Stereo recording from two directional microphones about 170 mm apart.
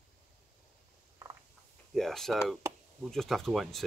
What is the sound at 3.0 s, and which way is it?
Speech, centre (ahead or behind).